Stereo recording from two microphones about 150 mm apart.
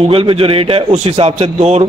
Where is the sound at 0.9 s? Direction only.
50° right (ahead or behind).